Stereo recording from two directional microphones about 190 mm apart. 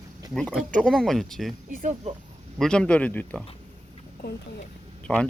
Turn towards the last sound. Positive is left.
turn(degrees=5)  # may be behind; listen again after turning